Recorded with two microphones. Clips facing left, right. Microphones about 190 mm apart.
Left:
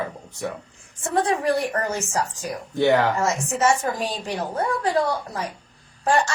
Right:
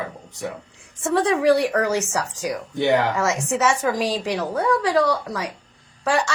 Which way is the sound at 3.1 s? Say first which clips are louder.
Right 1 dB; 80° right.